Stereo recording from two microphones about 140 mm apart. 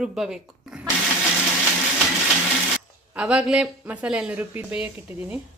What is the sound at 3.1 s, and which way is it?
Speech, 10° right (ahead or behind).